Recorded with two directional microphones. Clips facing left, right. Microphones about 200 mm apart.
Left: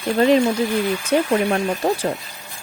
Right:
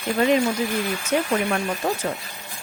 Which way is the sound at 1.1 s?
35° left (ahead or behind).